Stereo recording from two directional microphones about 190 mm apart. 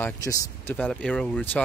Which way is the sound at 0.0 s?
15° left (ahead or behind).